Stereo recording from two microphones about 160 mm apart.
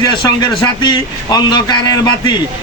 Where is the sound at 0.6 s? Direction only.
25° left (ahead or behind).